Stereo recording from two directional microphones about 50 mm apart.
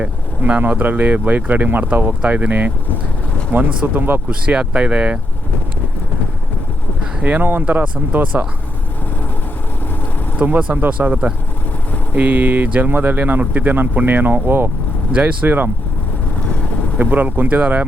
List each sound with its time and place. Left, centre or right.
0.4 s speech: right
4.3 s speech: right
7.2 s speech: right
10.3 s speech: right
17.0 s speech: right